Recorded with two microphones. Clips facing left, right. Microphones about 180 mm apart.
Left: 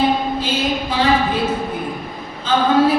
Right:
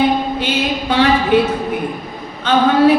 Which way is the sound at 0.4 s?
70° right (ahead or behind).